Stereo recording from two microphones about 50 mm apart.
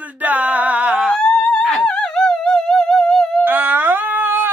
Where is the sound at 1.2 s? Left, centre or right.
Centre.